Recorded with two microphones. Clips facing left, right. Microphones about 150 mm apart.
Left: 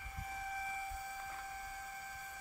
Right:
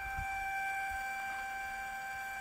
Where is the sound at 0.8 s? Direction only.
90° right.